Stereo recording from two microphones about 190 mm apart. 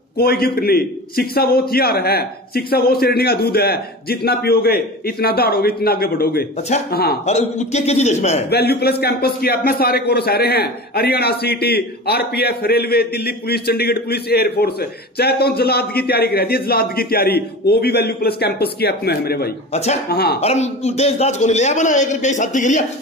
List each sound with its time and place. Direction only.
0.2 s a man's voice: 55° left (ahead or behind)
7.2 s a man's voice: 35° left (ahead or behind)
8.5 s a man's voice: 55° left (ahead or behind)
19.7 s a man's voice: 35° left (ahead or behind)
20.1 s a man's voice: 55° left (ahead or behind)
20.3 s a man's voice: 35° left (ahead or behind)